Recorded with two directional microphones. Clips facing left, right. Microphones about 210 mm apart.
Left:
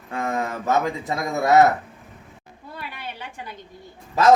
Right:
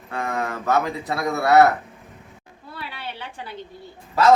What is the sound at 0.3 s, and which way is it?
A man's voice, 20° left (ahead or behind).